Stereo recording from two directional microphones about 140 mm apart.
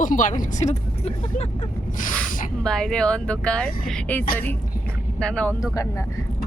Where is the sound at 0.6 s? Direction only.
50° left (ahead or behind).